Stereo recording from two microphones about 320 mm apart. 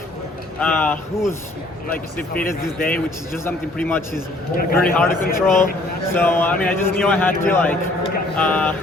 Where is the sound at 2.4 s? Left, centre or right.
Centre.